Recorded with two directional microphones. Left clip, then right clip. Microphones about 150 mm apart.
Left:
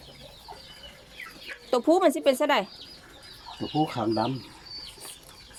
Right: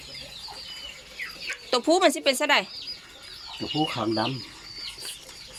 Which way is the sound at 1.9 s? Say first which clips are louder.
Even; 25° left (ahead or behind).